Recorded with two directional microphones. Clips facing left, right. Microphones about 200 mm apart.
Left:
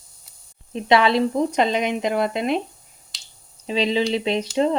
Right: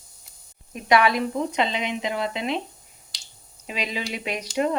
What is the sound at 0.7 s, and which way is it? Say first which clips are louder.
Speech: left 3 dB; 25° left (ahead or behind).